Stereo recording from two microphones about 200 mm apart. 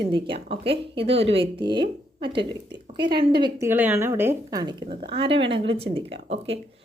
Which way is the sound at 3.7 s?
10° right (ahead or behind).